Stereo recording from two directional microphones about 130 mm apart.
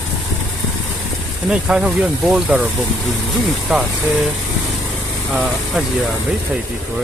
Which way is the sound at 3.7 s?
Centre (ahead or behind).